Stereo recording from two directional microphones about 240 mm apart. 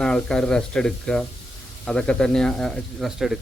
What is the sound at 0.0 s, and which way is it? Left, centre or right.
Speech, centre.